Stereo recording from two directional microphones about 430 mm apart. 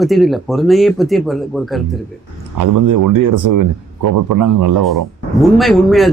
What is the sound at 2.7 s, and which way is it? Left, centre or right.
Speech, right.